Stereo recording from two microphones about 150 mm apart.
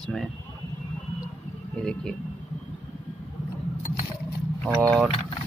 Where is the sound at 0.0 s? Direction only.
Centre (ahead or behind).